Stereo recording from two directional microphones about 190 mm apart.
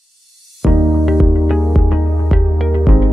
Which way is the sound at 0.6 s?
Centre (ahead or behind).